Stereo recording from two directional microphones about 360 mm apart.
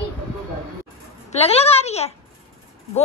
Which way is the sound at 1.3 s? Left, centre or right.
Centre.